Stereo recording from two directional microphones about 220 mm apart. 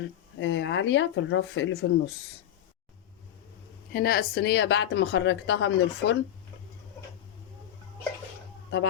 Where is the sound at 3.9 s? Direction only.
45° left (ahead or behind).